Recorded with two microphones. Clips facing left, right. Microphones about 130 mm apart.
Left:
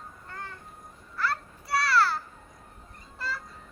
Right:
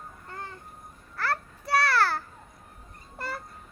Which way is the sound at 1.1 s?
60° right (ahead or behind).